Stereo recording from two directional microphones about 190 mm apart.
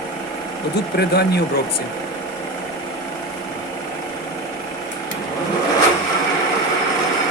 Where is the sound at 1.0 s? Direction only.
55° left (ahead or behind).